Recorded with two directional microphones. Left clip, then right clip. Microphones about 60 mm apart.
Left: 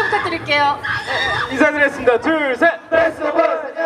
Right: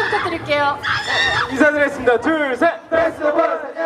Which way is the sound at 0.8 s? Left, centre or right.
Right.